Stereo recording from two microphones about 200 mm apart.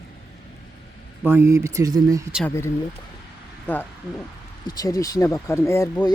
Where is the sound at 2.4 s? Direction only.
15° left (ahead or behind).